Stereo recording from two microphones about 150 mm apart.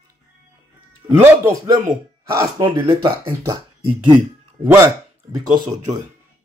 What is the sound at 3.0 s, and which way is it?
Speech, 30° right (ahead or behind).